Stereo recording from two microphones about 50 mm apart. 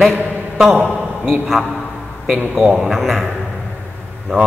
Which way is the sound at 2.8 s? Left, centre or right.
Centre.